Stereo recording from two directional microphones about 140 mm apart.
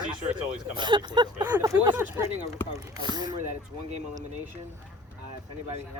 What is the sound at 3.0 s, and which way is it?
Speech, 30° right (ahead or behind).